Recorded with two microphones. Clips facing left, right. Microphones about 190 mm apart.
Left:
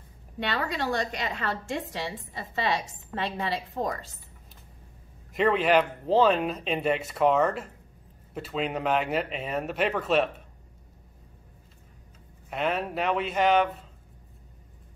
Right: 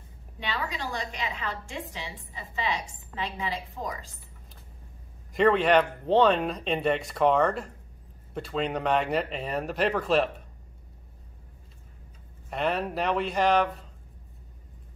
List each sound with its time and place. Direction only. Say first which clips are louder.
0.5 s a woman's voice: left 4 dB; 65° left (ahead or behind)
5.3 s speech: right 1 dB; centre (ahead or behind)
12.4 s speech: even; centre (ahead or behind)